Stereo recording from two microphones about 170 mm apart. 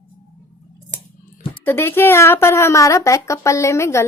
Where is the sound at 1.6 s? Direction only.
15° left (ahead or behind).